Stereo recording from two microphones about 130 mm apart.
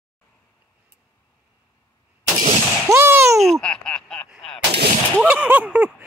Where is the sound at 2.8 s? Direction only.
20° right (ahead or behind).